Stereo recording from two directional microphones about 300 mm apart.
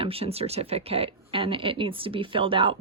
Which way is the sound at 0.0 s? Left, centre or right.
Centre.